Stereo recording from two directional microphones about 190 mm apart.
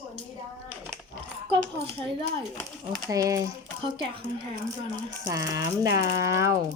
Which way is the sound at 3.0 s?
15° right (ahead or behind).